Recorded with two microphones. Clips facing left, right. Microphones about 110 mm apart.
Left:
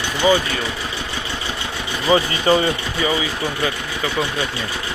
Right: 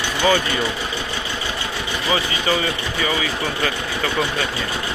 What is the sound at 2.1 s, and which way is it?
Speech, 30° left (ahead or behind).